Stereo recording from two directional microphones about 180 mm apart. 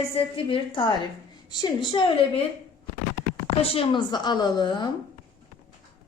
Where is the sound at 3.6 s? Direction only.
30° left (ahead or behind).